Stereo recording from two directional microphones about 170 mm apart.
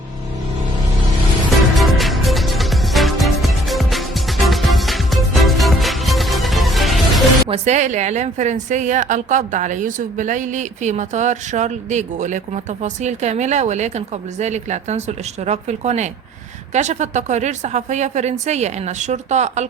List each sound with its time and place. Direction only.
1.7 s music: centre (ahead or behind)
7.4 s a woman's voice: 40° right (ahead or behind)